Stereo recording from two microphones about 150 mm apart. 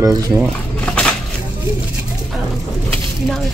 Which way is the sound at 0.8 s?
5° left (ahead or behind).